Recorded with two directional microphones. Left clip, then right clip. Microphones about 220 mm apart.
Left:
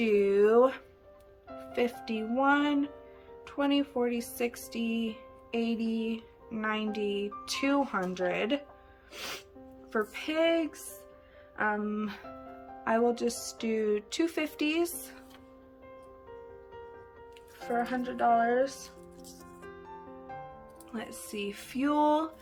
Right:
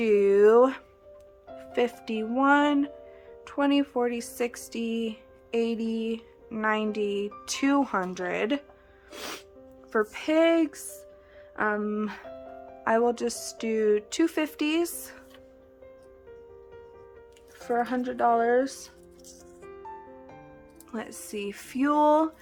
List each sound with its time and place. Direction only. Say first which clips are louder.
0.0 s a sound: right 5 dB; 20° right (ahead or behind)
1.5 s speech: right 4 dB; 15° right (ahead or behind)
17.6 s speech: right 4 dB; 30° right (ahead or behind)
20.9 s speech: right 4 dB; 20° right (ahead or behind)